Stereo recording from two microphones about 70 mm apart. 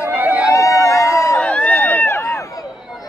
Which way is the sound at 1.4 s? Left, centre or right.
Centre.